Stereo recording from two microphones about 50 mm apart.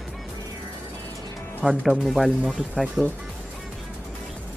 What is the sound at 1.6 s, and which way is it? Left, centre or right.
Speech, right.